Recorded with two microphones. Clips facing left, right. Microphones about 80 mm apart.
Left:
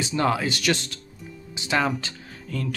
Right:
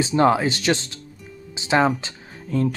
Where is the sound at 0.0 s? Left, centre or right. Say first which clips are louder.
Right 6 dB; right.